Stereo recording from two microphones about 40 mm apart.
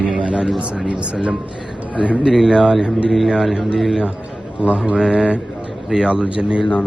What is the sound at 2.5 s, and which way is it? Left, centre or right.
Speech, right.